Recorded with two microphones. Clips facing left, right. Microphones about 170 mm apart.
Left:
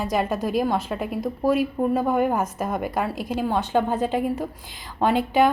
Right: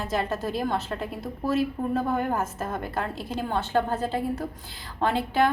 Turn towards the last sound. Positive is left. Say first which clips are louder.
# left 4 dB
turn(degrees=15)  # may be behind; listen again after turning